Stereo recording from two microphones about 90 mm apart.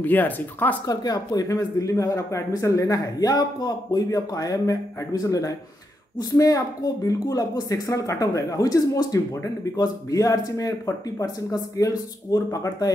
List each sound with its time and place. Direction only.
0.0 s speech: 20° left (ahead or behind)
0.8 s speech: 45° left (ahead or behind)